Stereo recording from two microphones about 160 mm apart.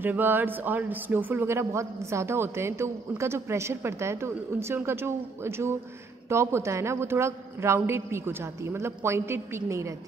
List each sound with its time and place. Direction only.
0.0 s speech: 10° right (ahead or behind)